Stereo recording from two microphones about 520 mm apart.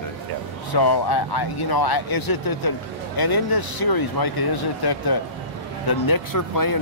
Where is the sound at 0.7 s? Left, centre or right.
Left.